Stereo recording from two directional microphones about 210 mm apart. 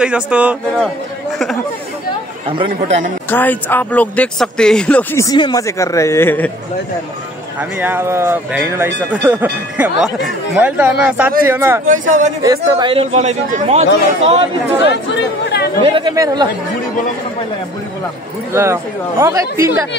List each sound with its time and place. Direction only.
0.0 s speech: 5° right (ahead or behind)
2.4 s speech: 25° right (ahead or behind)
3.3 s speech: 10° left (ahead or behind)
7.7 s speech: 10° right (ahead or behind)
11.8 s speech: 40° right (ahead or behind)
12.4 s speech: 20° right (ahead or behind)
15.5 s chatter: 50° left (ahead or behind)
15.8 s speech: 20° right (ahead or behind)
18.5 s speech: 10° right (ahead or behind)